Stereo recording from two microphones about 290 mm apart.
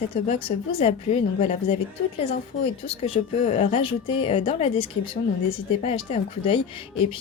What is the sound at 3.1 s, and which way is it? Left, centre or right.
A woman's voice, left.